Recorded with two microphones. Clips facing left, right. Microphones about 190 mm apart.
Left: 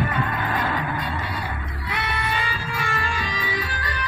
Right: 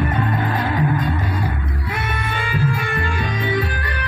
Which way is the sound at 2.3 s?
55° right (ahead or behind).